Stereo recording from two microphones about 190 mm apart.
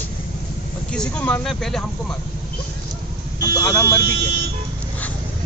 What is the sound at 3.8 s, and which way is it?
Speech, 15° left (ahead or behind).